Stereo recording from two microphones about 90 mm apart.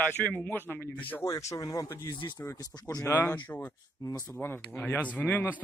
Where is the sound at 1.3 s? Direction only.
35° left (ahead or behind).